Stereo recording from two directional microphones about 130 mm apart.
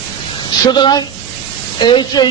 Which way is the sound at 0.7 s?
35° left (ahead or behind).